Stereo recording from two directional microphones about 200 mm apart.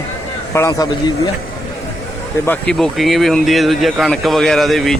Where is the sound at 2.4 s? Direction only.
5° left (ahead or behind).